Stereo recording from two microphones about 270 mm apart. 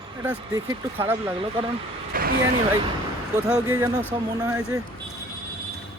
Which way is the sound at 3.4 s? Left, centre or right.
Centre.